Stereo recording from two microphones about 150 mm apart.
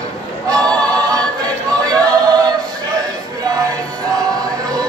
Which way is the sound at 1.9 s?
25° right (ahead or behind).